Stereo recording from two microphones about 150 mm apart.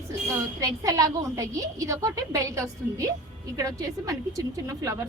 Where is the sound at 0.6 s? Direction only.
25° right (ahead or behind).